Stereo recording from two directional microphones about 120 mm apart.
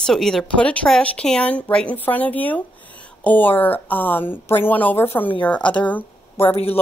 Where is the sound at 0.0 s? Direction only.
5° left (ahead or behind).